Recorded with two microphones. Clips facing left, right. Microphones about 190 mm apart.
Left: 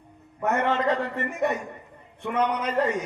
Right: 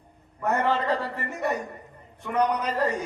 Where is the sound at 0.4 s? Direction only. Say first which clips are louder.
Left 1 dB; 35° right (ahead or behind).